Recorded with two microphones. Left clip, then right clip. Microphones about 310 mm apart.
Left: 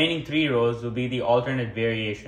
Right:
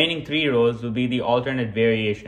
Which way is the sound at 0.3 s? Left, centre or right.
Right.